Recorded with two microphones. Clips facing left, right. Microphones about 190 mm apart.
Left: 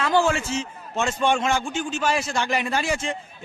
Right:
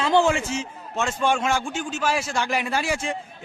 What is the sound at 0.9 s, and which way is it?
A man's voice, centre (ahead or behind).